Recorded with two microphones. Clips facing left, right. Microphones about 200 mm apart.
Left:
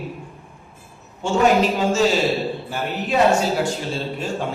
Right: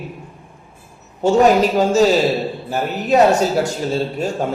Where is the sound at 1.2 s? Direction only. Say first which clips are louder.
Right 4 dB; 40° right (ahead or behind).